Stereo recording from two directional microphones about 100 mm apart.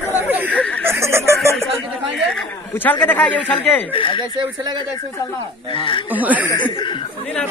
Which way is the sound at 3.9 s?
60° left (ahead or behind).